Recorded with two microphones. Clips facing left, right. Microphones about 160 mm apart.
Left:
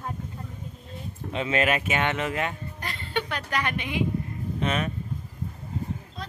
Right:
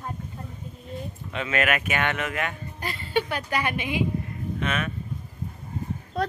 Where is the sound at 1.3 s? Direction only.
30° left (ahead or behind).